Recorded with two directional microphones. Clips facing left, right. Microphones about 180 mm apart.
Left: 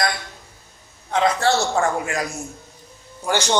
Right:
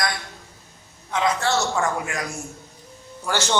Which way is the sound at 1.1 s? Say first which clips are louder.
Left 3 dB; 35° left (ahead or behind).